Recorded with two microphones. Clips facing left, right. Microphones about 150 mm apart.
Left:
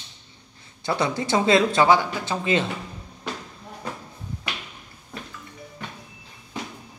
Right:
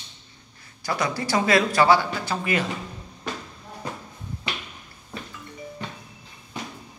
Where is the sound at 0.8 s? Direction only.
25° left (ahead or behind).